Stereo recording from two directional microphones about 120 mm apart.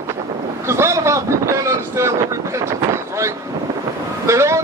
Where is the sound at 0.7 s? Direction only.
25° right (ahead or behind).